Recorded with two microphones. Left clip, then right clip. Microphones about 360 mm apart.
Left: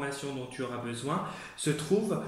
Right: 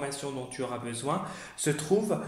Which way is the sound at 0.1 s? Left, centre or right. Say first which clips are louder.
Right 1 dB; centre.